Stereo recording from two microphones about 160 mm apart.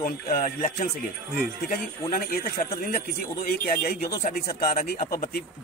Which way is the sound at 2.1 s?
65° left (ahead or behind).